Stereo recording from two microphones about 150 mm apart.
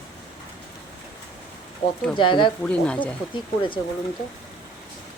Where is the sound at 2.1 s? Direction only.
30° left (ahead or behind).